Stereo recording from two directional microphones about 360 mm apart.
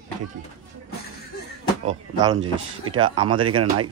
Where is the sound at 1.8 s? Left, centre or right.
Centre.